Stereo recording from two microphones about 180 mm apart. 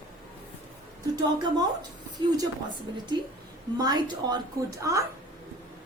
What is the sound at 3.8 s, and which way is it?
Speech, 20° right (ahead or behind).